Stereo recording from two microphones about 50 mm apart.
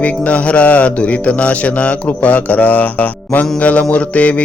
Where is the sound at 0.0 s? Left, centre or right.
Left.